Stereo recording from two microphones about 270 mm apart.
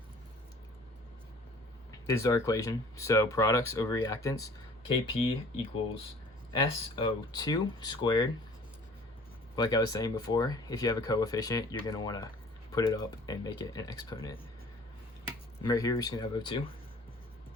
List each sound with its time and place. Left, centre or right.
2.0 s speech: centre
6.5 s speech: centre
9.6 s speech: centre
15.6 s speech: centre